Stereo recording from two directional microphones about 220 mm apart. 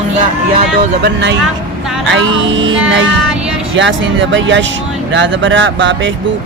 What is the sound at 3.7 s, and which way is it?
Speech, 55° right (ahead or behind).